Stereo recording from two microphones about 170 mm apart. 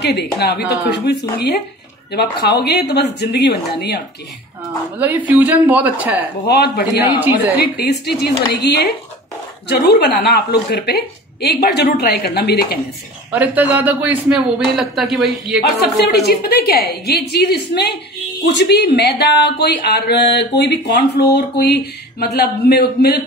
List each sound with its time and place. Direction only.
0.0 s speech: 75° left (ahead or behind)
2.1 s speech: 75° left (ahead or behind)
4.9 s speech: 10° right (ahead or behind)
6.4 s speech: 70° left (ahead or behind)
7.0 s speech: 10° right (ahead or behind)
7.6 s speech: 65° left (ahead or behind)
13.3 s speech: 10° right (ahead or behind)
16.0 s speech: 70° left (ahead or behind)
18.4 s speech: 90° left; by 23.2 s 70° left (ahead or behind)